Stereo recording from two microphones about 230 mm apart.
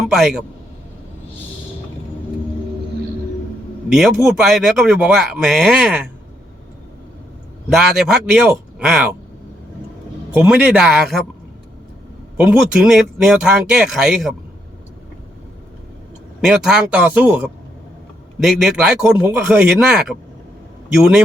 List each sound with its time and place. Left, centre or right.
0.1 s a man's voice: centre
3.9 s a man's voice: centre
7.7 s a man's voice: centre
10.3 s a man's voice: centre
12.4 s a man's voice: centre
16.4 s a man's voice: centre